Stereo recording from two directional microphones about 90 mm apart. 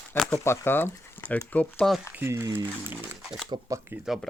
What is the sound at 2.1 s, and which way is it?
Speech, 30° right (ahead or behind).